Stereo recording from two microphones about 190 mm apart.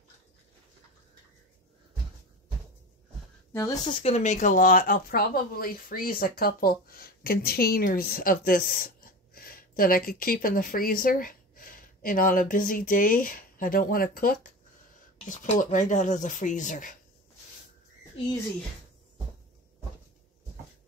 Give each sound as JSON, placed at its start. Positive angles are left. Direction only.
{"t": 3.5, "sound": "speech", "side_deg": 15}
{"t": 4.0, "sound": "speech", "side_deg": 35}